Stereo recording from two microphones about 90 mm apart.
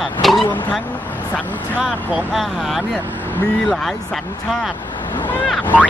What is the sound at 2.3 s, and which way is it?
Speech, centre (ahead or behind).